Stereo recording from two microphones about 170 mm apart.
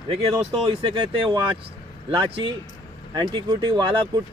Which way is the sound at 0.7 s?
30° right (ahead or behind).